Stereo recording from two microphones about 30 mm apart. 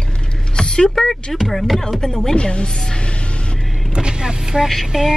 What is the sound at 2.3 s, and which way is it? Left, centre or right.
Speech, left.